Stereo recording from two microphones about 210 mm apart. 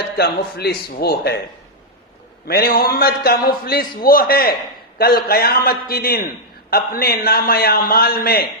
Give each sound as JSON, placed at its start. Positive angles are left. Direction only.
{"t": 0.2, "sound": "a man's voice", "side_deg": 50}
{"t": 2.5, "sound": "a man's voice", "side_deg": 45}